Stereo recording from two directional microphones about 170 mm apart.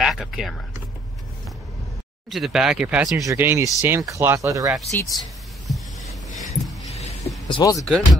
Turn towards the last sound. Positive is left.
turn(degrees=25)  # may be behind; listen again after turning